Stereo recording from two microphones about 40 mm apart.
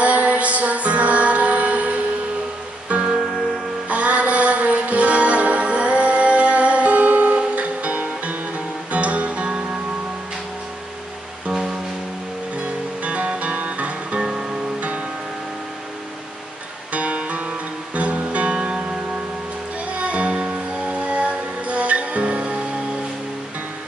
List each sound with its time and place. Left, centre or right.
0.0 s music: right
13.0 s music: right
14.2 s music: centre
14.8 s music: right
16.9 s guitar: right
17.9 s music: right
19.9 s music: right